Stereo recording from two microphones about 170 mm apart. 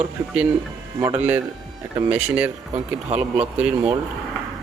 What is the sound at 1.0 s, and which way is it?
Speech, 35° right (ahead or behind).